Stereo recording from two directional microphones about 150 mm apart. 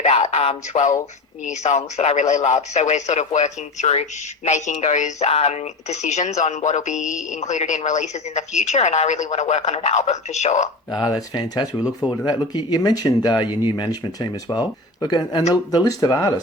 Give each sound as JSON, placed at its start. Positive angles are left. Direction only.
{"t": 0.0, "sound": "speech", "side_deg": 45}
{"t": 11.0, "sound": "speech", "side_deg": 30}
{"t": 15.0, "sound": "speech", "side_deg": 25}